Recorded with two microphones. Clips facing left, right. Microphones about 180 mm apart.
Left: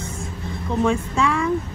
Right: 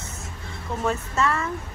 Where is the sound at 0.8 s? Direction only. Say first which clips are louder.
Left 4 dB; 5° right (ahead or behind).